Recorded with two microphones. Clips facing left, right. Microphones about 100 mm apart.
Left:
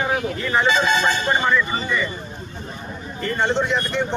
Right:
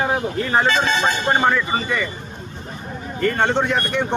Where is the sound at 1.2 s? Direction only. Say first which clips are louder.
Right 2 dB; 50° right (ahead or behind).